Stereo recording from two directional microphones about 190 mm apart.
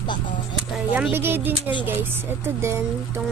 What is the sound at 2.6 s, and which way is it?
Speech, 15° right (ahead or behind).